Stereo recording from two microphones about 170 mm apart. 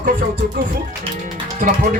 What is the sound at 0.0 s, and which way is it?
Speech, 55° right (ahead or behind).